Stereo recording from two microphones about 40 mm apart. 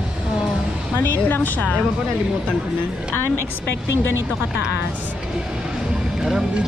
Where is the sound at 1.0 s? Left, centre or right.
Left.